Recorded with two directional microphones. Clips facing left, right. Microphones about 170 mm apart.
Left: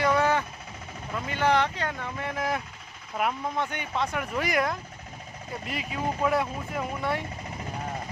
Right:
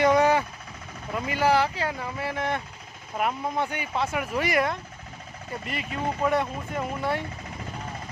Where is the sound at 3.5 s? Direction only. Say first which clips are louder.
Right 2 dB; 10° right (ahead or behind).